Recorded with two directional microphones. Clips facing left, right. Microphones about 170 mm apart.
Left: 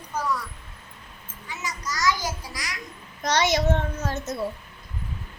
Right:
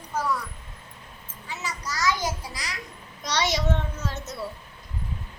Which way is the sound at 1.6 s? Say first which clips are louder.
Left 1 dB; 30° right (ahead or behind).